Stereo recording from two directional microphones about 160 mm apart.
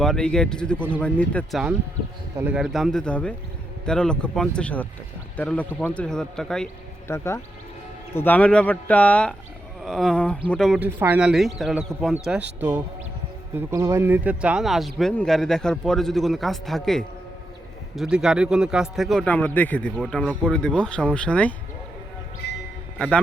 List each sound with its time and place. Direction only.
0.0 s a man's voice: 5° left (ahead or behind)
2.3 s speech: 15° right (ahead or behind)
2.6 s a man's voice: centre (ahead or behind)
7.1 s a man's voice: 15° left (ahead or behind)
10.8 s a man's voice: 10° right (ahead or behind)
13.6 s a man's voice: 15° right (ahead or behind); by 21.5 s 10° left (ahead or behind)
23.0 s a man's voice: 5° left (ahead or behind)